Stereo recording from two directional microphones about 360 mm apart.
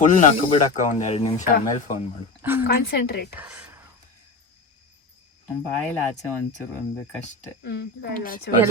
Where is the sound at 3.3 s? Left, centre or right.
Centre.